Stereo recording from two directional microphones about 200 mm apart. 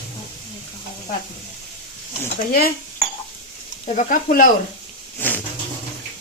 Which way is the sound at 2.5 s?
45° left (ahead or behind).